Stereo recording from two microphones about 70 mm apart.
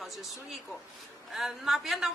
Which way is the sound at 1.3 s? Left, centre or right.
Centre.